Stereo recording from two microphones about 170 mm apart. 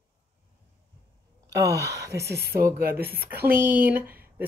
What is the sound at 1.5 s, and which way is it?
Speech, 20° right (ahead or behind).